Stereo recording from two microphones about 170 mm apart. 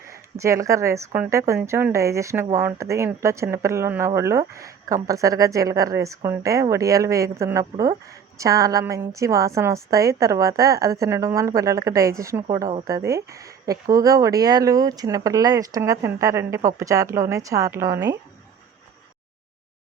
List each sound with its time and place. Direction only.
0.3 s a woman's voice: 20° right (ahead or behind)